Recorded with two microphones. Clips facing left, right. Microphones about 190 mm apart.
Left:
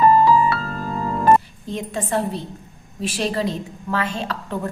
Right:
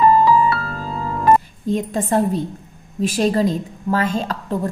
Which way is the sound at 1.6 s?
45° right (ahead or behind).